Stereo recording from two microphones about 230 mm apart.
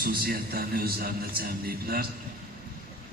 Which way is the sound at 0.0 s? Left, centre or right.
Right.